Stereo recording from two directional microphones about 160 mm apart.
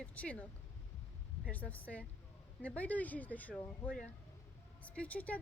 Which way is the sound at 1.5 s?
10° left (ahead or behind).